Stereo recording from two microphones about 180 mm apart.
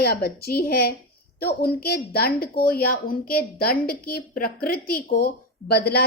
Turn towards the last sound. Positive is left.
turn(degrees=65)  # may be behind; listen again after turning